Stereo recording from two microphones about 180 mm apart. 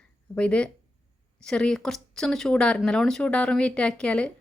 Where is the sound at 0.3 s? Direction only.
5° left (ahead or behind).